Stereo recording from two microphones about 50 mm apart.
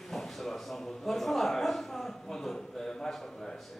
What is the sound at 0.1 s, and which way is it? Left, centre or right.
A man's voice, centre.